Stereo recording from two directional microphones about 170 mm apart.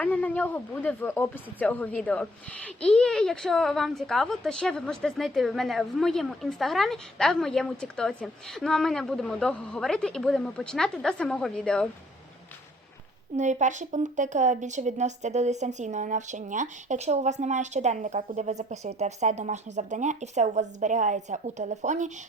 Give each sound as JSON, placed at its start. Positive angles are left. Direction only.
{"t": 0.0, "sound": "a woman's voice", "side_deg": 10}
{"t": 13.3, "sound": "a woman's voice", "side_deg": -45}